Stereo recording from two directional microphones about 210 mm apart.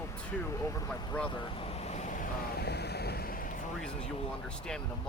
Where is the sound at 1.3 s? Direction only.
25° left (ahead or behind); by 3.6 s 40° left (ahead or behind).